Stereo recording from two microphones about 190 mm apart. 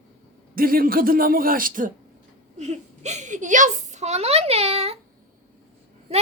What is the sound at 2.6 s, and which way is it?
A woman's voice, 35° right (ahead or behind).